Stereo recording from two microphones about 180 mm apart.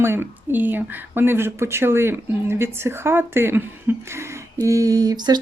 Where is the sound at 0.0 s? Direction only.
15° right (ahead or behind).